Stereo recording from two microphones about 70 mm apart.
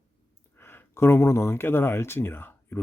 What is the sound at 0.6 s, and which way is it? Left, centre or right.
Speech, left.